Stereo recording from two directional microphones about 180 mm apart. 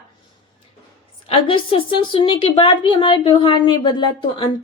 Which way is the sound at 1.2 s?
30° left (ahead or behind).